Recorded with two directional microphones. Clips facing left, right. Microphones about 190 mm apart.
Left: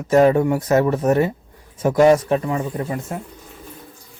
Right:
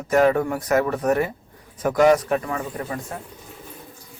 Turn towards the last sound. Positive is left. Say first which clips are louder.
# left 4 dB
turn(degrees=25)  # may be behind; listen again after turning